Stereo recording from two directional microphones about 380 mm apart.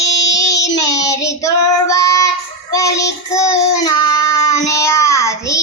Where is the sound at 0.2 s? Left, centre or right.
Left.